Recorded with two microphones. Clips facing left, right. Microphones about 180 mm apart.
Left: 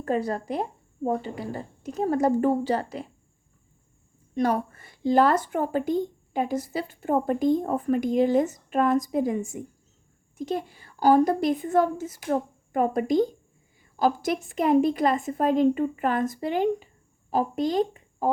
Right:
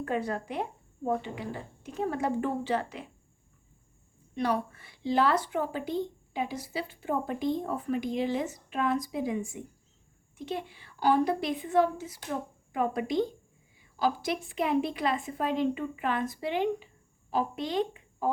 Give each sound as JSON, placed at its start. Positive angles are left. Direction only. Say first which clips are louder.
{"t": 0.0, "sound": "speech", "louder": "left 5 dB", "side_deg": 35}
{"t": 4.4, "sound": "speech", "louder": "left 5 dB", "side_deg": 45}